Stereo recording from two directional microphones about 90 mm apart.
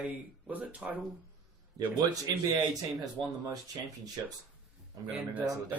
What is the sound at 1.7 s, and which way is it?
Speech, 35° right (ahead or behind).